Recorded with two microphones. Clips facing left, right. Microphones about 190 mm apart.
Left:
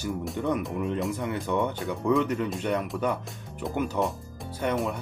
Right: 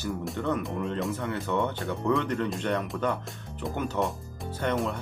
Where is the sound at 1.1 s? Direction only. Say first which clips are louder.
Left 1 dB; 15° left (ahead or behind).